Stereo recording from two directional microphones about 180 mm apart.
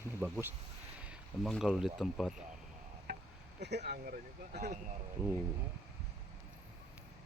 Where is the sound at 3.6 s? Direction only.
70° right (ahead or behind).